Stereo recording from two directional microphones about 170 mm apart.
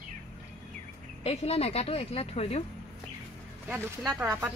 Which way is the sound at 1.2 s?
35° left (ahead or behind).